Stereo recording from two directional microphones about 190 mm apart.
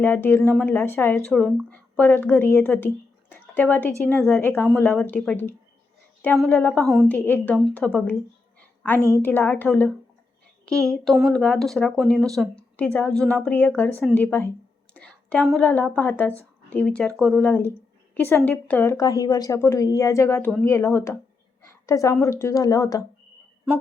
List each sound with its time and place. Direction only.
0.0 s a woman's voice: 10° left (ahead or behind)